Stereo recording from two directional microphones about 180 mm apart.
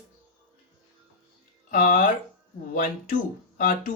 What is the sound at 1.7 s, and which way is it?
Speech, 50° left (ahead or behind).